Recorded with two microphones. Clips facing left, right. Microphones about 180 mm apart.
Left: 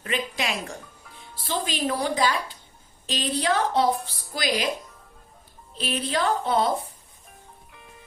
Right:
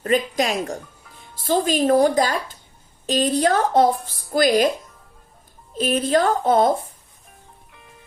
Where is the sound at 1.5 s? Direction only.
45° right (ahead or behind).